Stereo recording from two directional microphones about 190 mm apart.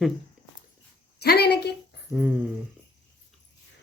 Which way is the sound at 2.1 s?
10° right (ahead or behind).